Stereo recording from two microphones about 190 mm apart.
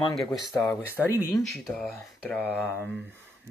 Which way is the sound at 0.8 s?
15° left (ahead or behind).